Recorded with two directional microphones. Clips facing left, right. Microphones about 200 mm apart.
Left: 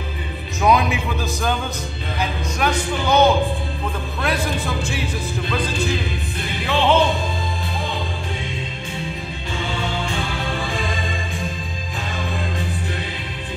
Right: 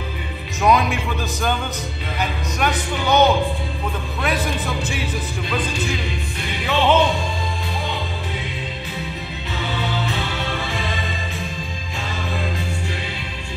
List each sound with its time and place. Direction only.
0.6 s music: centre (ahead or behind)
2.1 s a man's voice: centre (ahead or behind)
9.7 s music: 30° left (ahead or behind)
10.5 s music: centre (ahead or behind)